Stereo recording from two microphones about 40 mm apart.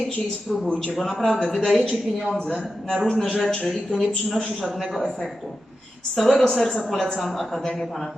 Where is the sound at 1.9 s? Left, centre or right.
Centre.